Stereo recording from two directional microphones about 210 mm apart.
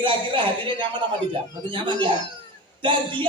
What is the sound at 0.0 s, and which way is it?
A man's voice, 25° right (ahead or behind).